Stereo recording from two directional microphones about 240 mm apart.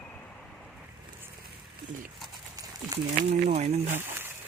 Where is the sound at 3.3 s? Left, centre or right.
Right.